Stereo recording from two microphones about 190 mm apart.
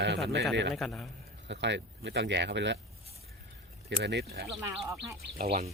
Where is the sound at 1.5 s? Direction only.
65° right (ahead or behind).